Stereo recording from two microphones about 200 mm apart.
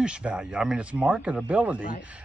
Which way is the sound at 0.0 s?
5° right (ahead or behind).